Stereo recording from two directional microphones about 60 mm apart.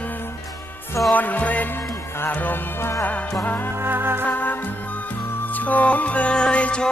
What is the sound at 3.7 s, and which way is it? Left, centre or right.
Music, right.